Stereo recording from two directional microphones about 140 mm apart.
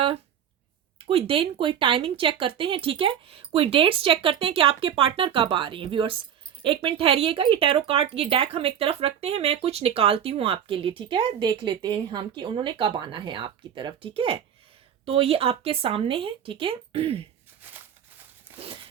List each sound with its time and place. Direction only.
0.9 s speech: 40° right (ahead or behind)
18.5 s dog: 40° right (ahead or behind)